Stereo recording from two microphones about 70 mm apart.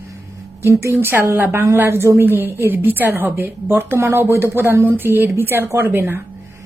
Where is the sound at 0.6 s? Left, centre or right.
Right.